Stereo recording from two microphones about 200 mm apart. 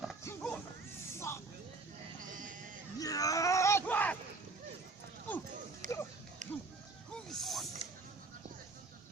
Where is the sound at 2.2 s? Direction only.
40° right (ahead or behind).